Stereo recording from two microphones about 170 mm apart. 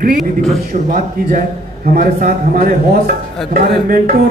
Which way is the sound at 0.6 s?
55° right (ahead or behind).